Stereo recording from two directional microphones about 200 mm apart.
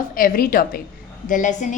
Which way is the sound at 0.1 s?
45° left (ahead or behind).